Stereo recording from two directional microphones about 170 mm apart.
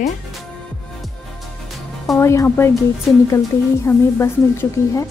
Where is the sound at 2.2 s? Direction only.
15° left (ahead or behind).